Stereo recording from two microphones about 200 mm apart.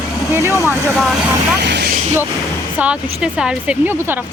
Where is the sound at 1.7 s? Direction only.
55° right (ahead or behind).